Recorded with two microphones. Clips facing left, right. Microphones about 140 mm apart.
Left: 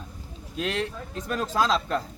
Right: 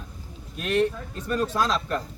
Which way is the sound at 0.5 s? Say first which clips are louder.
Right 5 dB; 90° left.